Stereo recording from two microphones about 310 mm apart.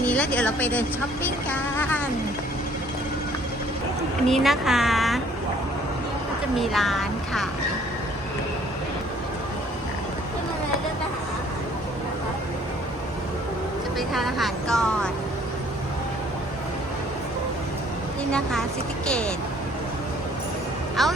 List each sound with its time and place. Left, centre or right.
0.0 s speech: centre
4.3 s speech: centre
6.6 s speech: centre
14.1 s speech: centre
18.3 s speech: centre
21.0 s speech: centre